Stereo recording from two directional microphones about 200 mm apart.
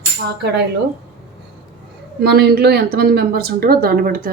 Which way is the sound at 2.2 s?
55° right (ahead or behind).